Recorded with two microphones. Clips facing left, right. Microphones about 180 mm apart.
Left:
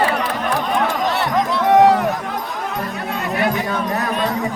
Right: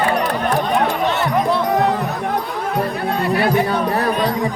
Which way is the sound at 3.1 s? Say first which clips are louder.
Right 2 dB; 30° right (ahead or behind).